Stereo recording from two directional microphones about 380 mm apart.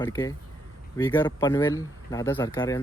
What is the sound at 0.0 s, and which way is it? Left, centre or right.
Speech, centre.